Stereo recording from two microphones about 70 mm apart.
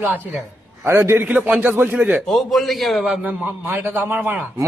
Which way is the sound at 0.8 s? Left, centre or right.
Right.